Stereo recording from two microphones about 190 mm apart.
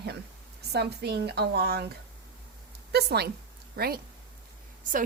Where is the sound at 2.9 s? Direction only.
60° right (ahead or behind).